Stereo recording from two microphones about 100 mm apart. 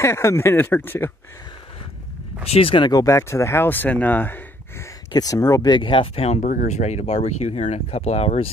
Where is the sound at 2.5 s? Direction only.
65° left (ahead or behind).